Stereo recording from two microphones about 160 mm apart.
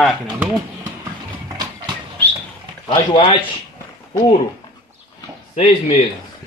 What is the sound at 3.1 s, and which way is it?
Speech, 30° left (ahead or behind).